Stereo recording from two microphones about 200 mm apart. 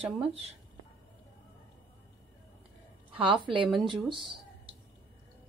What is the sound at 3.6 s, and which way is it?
Speech, centre (ahead or behind).